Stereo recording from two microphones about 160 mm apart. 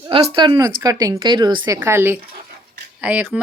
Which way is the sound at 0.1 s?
30° right (ahead or behind).